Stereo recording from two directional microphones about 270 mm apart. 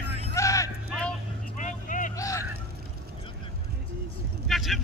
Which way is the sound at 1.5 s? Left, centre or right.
Left.